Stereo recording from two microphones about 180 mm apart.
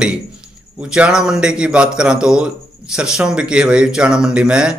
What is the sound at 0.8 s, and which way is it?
A man's voice, 5° right (ahead or behind).